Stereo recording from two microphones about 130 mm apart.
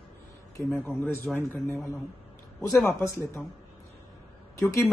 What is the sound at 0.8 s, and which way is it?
Speech, 15° left (ahead or behind).